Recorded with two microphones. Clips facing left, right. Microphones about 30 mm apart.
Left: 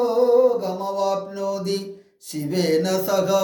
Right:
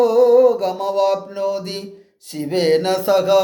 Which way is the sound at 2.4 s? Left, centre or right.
Right.